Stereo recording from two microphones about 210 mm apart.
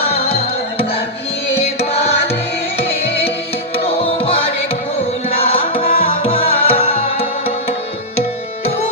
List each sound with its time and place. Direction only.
0.0 s music: 30° left (ahead or behind)
3.8 s music: 25° left (ahead or behind)
5.5 s music: 25° left (ahead or behind)